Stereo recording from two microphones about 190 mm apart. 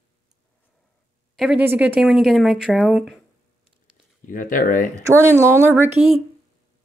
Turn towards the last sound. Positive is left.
turn(degrees=-10)  # may be behind; listen again after turning